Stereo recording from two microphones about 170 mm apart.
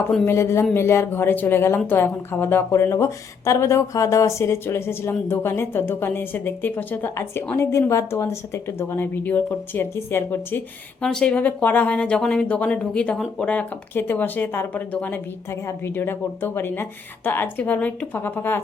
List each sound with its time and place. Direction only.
0.3 s a woman's voice: 15° left (ahead or behind)